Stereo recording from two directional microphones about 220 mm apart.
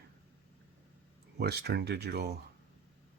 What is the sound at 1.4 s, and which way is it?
Speech, 50° right (ahead or behind).